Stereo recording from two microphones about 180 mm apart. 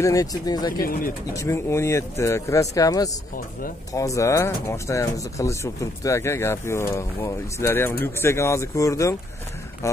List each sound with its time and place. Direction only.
0.0 s speech: 20° left (ahead or behind)
0.7 s speech: 55° left (ahead or behind)
1.3 s speech: 15° left (ahead or behind)